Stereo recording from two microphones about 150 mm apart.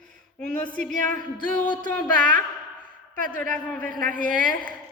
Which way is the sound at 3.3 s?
10° left (ahead or behind).